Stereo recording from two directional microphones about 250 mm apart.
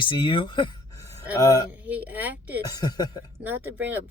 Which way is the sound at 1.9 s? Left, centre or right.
Centre.